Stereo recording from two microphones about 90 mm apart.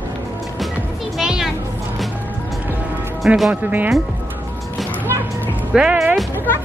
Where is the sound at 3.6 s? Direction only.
20° right (ahead or behind).